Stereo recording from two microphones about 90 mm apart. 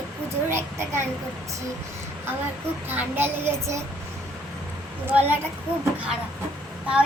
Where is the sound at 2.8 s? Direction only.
25° right (ahead or behind).